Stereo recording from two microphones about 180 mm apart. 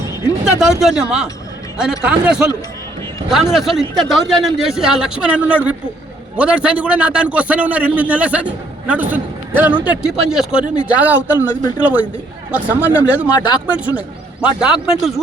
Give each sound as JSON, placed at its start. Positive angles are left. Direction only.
{"t": 0.8, "sound": "a man's voice", "side_deg": -5}
{"t": 13.3, "sound": "speech", "side_deg": 25}
{"t": 13.7, "sound": "a man's voice", "side_deg": -10}